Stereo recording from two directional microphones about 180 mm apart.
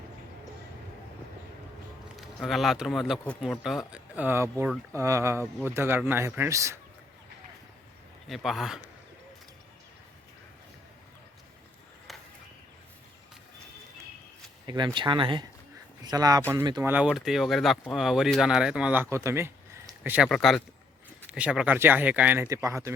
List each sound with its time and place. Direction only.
2.1 s speech: centre (ahead or behind); by 6.7 s 15° right (ahead or behind)
8.3 s speech: centre (ahead or behind)
14.7 s speech: 25° right (ahead or behind)
16.9 s speech: 5° right (ahead or behind)
19.1 s a sound: 15° right (ahead or behind)
20.3 s speech: centre (ahead or behind); by 22.9 s 15° right (ahead or behind)